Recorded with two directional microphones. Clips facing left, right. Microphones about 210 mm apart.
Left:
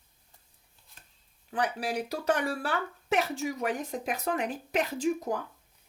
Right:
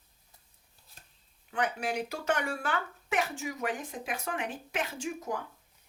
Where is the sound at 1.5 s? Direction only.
35° left (ahead or behind).